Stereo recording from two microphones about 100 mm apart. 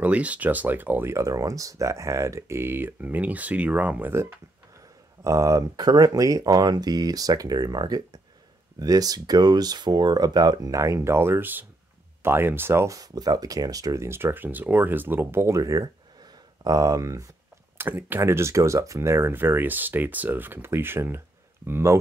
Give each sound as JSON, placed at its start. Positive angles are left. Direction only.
{"t": 0.0, "sound": "speech", "side_deg": -15}
{"t": 1.1, "sound": "speech", "side_deg": -30}
{"t": 5.2, "sound": "speech", "side_deg": -35}
{"t": 17.7, "sound": "speech", "side_deg": -20}